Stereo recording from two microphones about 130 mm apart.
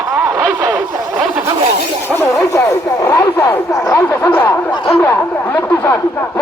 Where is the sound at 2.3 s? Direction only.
25° left (ahead or behind).